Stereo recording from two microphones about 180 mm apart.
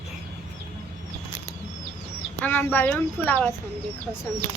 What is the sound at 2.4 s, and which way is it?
Speech, 10° left (ahead or behind).